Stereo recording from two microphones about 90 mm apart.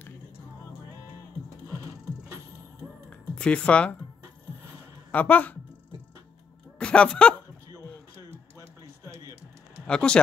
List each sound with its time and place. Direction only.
3.1 s music: 10° left (ahead or behind)
5.1 s speech: 20° left (ahead or behind)
6.8 s speech: 10° left (ahead or behind)
9.0 s typing: 35° right (ahead or behind)
9.8 s speech: 10° left (ahead or behind)